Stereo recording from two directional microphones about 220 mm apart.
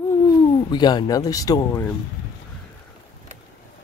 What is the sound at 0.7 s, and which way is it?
Speech, 20° left (ahead or behind).